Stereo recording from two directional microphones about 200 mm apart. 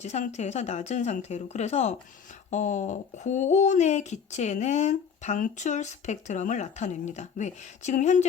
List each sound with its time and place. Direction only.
0.0 s speech: 35° left (ahead or behind)